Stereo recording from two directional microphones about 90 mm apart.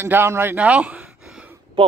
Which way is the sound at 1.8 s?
85° right.